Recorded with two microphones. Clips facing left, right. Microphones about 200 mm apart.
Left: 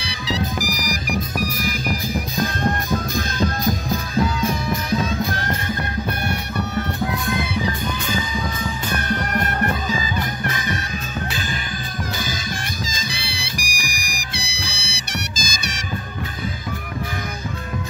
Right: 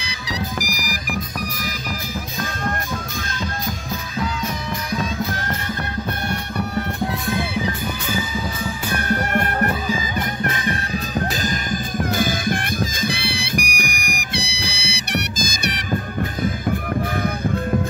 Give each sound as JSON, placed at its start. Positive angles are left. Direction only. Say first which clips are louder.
{"t": 2.4, "sound": "music", "louder": "left 3 dB", "side_deg": 40}
{"t": 9.7, "sound": "music", "louder": "right 1 dB", "side_deg": -10}
{"t": 10.7, "sound": "music", "louder": "right 3 dB", "side_deg": -40}
{"t": 12.0, "sound": "music", "louder": "right 7 dB", "side_deg": -55}